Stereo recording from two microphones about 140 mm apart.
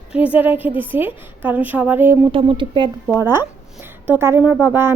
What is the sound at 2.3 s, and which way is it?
Speech, 35° right (ahead or behind).